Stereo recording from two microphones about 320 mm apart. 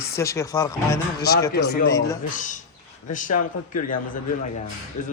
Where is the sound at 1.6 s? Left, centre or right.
Left.